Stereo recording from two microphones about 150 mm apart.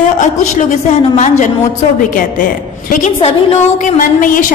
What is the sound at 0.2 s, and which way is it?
Speech, 55° left (ahead or behind).